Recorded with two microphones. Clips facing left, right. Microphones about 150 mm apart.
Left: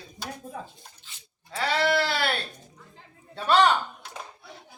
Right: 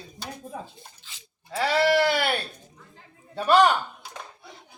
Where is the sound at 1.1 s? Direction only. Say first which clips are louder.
Right 2 dB; 90° right.